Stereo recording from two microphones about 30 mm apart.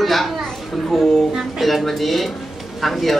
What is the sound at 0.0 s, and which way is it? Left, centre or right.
Chatter, centre.